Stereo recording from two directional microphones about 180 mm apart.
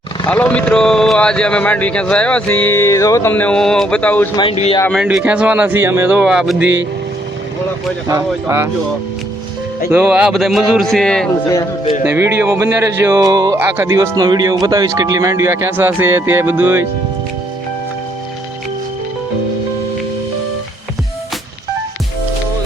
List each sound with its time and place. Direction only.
0.3 s speech: 10° left (ahead or behind)
4.5 s speech: 35° left (ahead or behind)
5.0 s speech: 10° right (ahead or behind)
8.0 s speech: 15° right (ahead or behind)
9.9 s a man's voice: 10° right (ahead or behind)
12.0 s speech: 15° right (ahead or behind)